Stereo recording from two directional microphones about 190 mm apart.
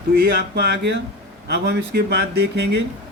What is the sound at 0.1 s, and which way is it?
Speech, 55° right (ahead or behind).